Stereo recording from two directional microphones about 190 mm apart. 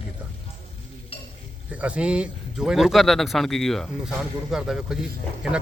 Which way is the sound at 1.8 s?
5° right (ahead or behind).